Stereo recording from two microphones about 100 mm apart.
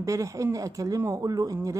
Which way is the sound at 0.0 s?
30° right (ahead or behind).